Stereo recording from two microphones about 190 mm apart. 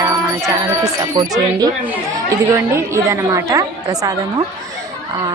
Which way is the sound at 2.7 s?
15° right (ahead or behind).